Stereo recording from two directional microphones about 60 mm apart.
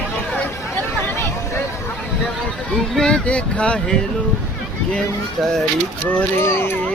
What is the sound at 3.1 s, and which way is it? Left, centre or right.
Speech, centre.